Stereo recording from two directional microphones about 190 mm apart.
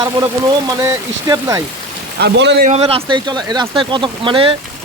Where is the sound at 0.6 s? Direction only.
20° right (ahead or behind).